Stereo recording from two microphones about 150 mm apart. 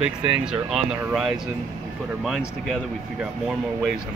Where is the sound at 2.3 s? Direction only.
Centre (ahead or behind).